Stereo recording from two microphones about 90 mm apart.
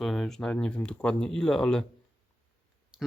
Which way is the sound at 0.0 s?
5° left (ahead or behind).